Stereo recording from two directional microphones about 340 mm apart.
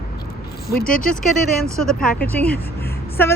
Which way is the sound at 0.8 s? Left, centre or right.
Left.